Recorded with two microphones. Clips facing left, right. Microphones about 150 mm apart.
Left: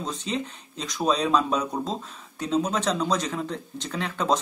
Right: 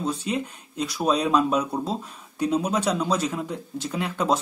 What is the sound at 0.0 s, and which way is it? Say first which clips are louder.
Speech: right 3 dB; 10° right (ahead or behind).